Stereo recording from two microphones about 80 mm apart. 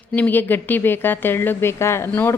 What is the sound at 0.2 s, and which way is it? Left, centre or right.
Speech, left.